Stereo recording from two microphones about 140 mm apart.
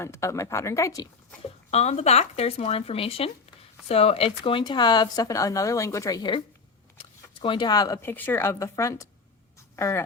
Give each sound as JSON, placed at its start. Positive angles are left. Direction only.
{"t": 0.0, "sound": "speech", "side_deg": 20}
{"t": 1.7, "sound": "speech", "side_deg": 50}
{"t": 7.0, "sound": "a sound", "side_deg": 35}
{"t": 8.0, "sound": "speech", "side_deg": 15}